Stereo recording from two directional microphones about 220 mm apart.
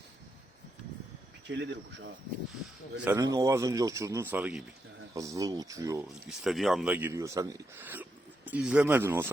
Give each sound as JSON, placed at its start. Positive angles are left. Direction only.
{"t": 1.5, "sound": "speech", "side_deg": -50}
{"t": 3.0, "sound": "speech", "side_deg": -10}
{"t": 6.2, "sound": "speech", "side_deg": 0}